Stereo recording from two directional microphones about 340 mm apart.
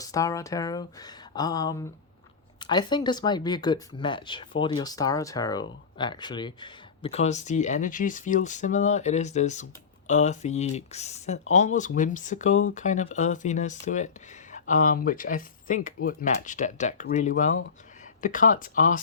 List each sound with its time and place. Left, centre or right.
0.0 s speech: centre